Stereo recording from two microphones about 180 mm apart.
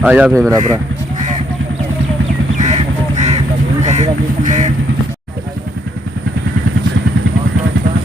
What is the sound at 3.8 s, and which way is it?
Quack, 40° right (ahead or behind).